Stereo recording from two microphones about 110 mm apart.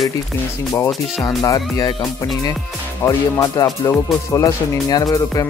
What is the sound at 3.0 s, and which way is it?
A man's voice, 30° left (ahead or behind).